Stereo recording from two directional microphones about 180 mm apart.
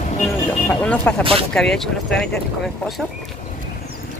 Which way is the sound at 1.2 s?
30° right (ahead or behind).